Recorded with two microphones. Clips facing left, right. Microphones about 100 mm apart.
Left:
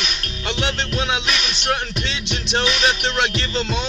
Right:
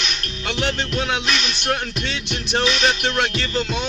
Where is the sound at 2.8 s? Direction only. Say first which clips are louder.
Even; 20° left (ahead or behind).